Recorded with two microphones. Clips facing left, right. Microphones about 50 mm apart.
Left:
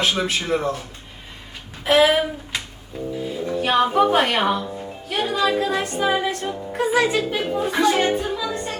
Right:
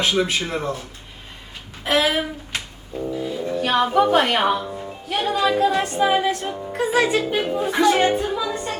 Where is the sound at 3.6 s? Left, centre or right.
Centre.